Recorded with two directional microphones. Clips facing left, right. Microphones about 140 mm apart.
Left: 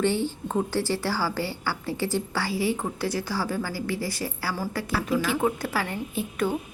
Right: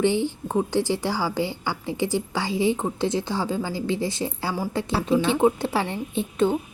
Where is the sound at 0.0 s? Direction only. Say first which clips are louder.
Right 3 dB; 15° right (ahead or behind).